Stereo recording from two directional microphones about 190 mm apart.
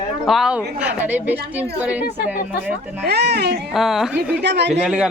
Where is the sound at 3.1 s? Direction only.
60° right (ahead or behind).